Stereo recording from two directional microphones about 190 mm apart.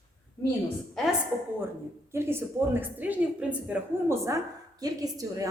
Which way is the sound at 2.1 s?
15° right (ahead or behind).